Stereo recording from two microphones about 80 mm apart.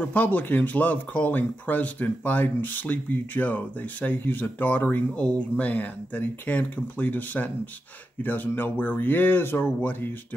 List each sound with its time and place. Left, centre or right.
0.0 s speech: left